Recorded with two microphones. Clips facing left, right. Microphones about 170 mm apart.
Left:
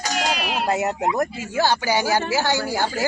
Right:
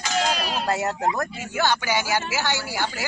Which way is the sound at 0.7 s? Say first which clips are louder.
Left 2 dB; 15° left (ahead or behind).